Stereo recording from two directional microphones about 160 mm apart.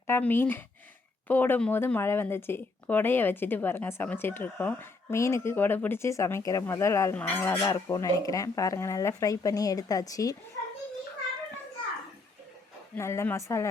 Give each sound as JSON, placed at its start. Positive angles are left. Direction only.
{"t": 0.1, "sound": "speech", "side_deg": 15}
{"t": 13.0, "sound": "speech", "side_deg": 15}